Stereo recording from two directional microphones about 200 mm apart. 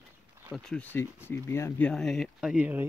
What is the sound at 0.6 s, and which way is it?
Speech, 5° left (ahead or behind).